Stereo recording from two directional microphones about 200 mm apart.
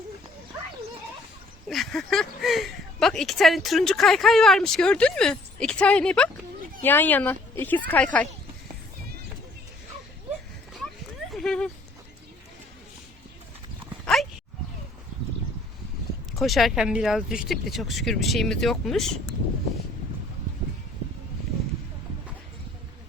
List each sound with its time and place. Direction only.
1.6 s a woman's voice: centre (ahead or behind)
11.3 s a sound: 5° left (ahead or behind)
14.0 s dog: centre (ahead or behind)
16.3 s speech: centre (ahead or behind)